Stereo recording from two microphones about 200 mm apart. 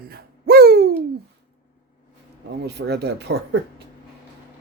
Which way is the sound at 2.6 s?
55° right (ahead or behind).